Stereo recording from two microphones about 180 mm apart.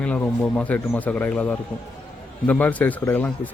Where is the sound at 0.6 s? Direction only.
10° left (ahead or behind).